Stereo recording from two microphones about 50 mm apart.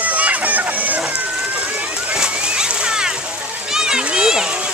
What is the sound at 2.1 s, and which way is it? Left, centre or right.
Splash, centre.